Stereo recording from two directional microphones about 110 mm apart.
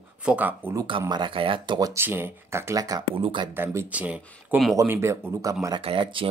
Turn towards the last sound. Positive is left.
turn(degrees=-50)  # may be behind; listen again after turning